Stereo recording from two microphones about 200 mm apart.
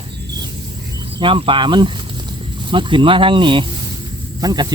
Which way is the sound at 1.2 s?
25° right (ahead or behind).